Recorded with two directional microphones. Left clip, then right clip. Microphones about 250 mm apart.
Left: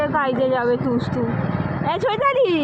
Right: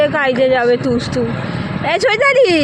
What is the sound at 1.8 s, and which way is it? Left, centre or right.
Speech, centre.